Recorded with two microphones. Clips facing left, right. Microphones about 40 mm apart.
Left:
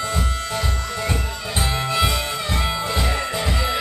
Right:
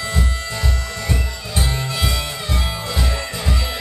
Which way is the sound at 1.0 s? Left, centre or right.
Left.